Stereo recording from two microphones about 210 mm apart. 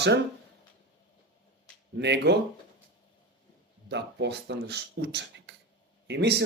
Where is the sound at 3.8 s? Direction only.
55° right (ahead or behind).